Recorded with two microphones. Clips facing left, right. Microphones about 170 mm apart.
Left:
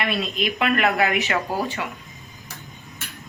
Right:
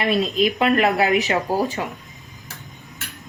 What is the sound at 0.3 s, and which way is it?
Speech, 35° right (ahead or behind).